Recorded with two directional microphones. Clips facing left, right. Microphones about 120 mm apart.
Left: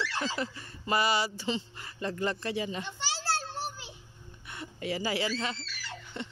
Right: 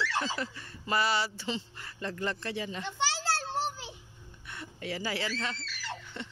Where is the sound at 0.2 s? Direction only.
5° left (ahead or behind).